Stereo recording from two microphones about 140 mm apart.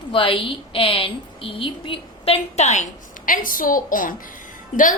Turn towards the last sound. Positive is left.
turn(degrees=70)  # may be behind; listen again after turning